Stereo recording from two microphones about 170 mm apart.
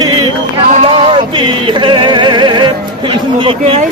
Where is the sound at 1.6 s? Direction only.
30° right (ahead or behind).